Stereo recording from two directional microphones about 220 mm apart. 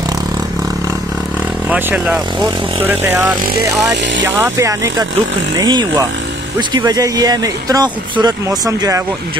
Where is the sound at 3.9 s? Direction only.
55° right (ahead or behind).